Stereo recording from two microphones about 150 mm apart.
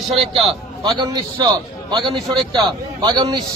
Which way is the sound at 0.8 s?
25° right (ahead or behind).